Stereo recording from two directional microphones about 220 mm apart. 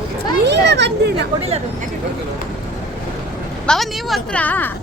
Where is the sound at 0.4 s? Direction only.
50° right (ahead or behind).